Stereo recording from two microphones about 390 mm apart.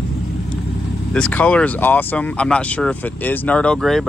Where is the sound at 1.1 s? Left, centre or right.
Centre.